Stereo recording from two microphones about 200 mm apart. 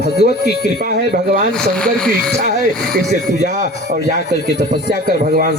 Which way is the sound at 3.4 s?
40° right (ahead or behind).